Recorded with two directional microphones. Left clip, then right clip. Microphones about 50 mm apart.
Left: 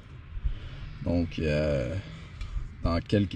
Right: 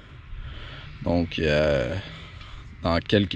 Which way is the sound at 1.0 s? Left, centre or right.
Left.